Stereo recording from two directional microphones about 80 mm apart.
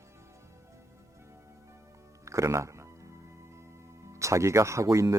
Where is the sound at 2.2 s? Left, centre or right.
Right.